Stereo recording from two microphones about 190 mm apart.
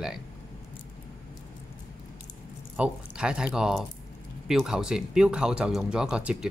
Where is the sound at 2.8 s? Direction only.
5° right (ahead or behind).